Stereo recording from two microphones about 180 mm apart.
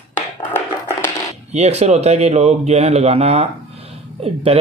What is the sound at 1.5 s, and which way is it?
Speech, 35° right (ahead or behind).